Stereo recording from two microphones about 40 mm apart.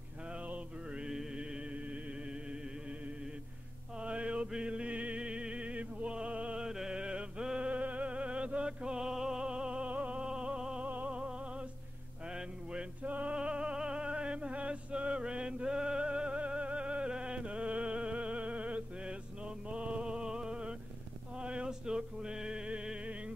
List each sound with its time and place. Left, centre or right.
0.9 s mantra: centre
4.0 s music: right
6.6 s music: centre; by 10.2 s right
10.2 s music: right
13.0 s music: right
13.4 s music: right